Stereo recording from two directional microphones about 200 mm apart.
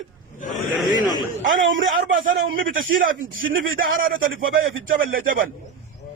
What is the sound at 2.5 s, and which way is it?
Speech, 45° right (ahead or behind).